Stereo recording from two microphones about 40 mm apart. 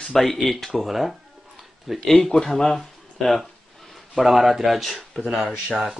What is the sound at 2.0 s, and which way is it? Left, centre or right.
A man's voice, centre.